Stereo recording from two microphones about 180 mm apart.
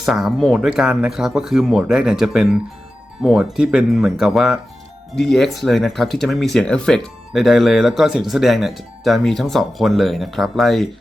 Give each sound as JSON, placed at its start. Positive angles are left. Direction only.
{"t": 0.0, "sound": "speech", "side_deg": 0}